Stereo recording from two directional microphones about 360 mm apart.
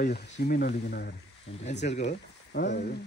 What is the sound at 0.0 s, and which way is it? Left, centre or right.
Speech, left.